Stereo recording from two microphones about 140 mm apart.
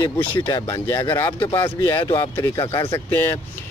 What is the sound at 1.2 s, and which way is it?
Speech, 35° left (ahead or behind).